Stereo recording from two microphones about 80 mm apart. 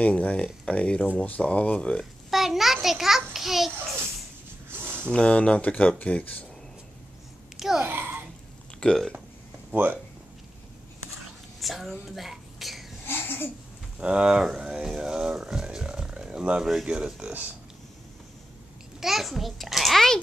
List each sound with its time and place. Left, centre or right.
0.0 s speech: centre
2.3 s a sound: centre
4.6 s a sound: right
5.1 s speech: centre
7.5 s babbling: centre
7.8 s babbling: right
8.7 s speech: centre
9.7 s speech: right
11.6 s speech: centre
13.0 s a sound: left
13.9 s speech: centre
18.9 s a child's voice: centre